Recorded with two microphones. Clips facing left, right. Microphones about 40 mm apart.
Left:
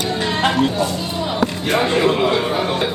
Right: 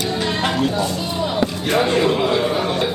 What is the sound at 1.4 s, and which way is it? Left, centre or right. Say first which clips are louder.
Speech: left 1 dB; centre.